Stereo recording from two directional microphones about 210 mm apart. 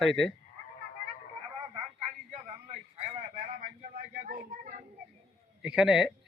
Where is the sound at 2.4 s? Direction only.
30° right (ahead or behind).